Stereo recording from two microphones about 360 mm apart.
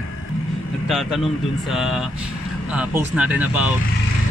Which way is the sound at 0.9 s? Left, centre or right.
Centre.